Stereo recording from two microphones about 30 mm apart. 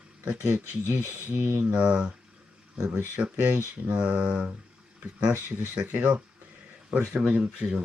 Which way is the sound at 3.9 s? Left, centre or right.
Right.